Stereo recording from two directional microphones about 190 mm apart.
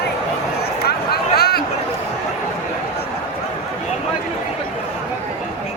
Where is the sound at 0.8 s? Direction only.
55° left (ahead or behind).